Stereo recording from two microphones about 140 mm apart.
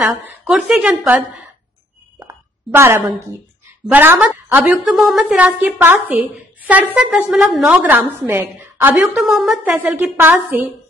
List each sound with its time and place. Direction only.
0.0 s a woman's voice: 10° right (ahead or behind)
2.7 s a woman's voice: 15° right (ahead or behind)
9.1 s a woman's voice: centre (ahead or behind)